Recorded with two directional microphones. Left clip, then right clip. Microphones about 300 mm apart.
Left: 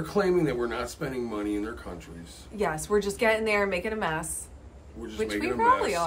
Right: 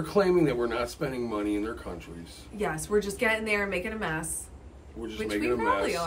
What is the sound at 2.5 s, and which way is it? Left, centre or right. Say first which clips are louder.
A woman's voice: left 2 dB; centre.